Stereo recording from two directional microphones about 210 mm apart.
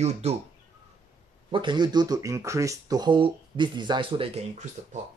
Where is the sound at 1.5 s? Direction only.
20° right (ahead or behind).